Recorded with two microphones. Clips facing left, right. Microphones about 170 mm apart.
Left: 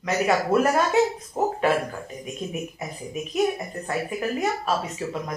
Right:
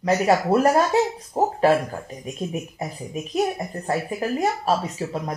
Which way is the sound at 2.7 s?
35° right (ahead or behind).